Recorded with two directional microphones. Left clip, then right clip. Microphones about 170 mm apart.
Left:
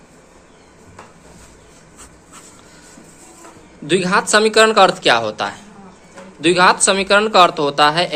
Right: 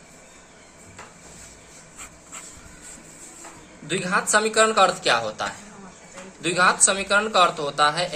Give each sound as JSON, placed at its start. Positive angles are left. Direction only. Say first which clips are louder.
{"t": 3.8, "sound": "speech", "louder": "left 8 dB", "side_deg": 60}